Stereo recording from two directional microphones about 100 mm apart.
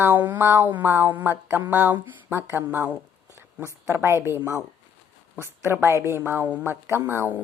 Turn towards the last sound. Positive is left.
turn(degrees=-20)  # may be behind; listen again after turning